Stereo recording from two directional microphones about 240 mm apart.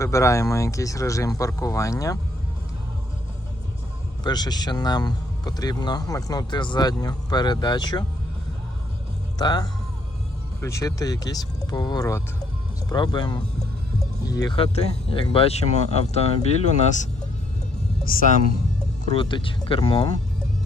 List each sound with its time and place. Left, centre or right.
0.0 s speech: centre
4.2 s speech: centre
9.4 s speech: centre
19.1 s speech: left